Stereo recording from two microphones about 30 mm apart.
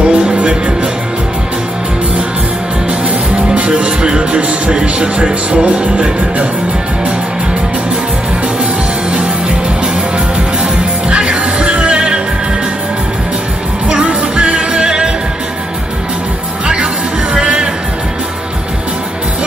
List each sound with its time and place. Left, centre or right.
0.0 s music: right
3.3 s music: right
11.1 s music: right
13.8 s music: right
17.3 s music: right